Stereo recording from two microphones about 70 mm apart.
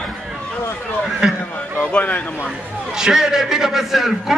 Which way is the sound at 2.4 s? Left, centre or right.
Centre.